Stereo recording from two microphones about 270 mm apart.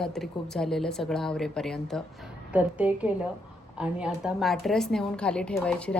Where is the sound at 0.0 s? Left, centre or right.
Centre.